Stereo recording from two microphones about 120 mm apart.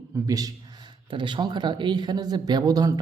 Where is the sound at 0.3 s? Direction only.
30° right (ahead or behind).